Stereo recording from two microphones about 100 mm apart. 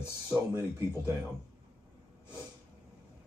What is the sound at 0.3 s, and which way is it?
Speech, 25° right (ahead or behind).